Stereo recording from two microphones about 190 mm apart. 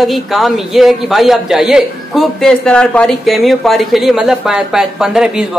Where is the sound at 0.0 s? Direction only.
Centre (ahead or behind).